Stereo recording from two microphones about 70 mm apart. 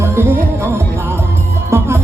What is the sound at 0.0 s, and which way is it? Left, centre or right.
Music, right.